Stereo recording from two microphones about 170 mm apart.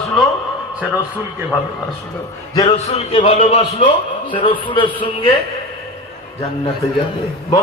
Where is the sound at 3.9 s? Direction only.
30° left (ahead or behind).